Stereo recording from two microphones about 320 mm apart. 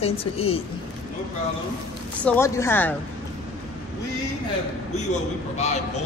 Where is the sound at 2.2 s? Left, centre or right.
Centre.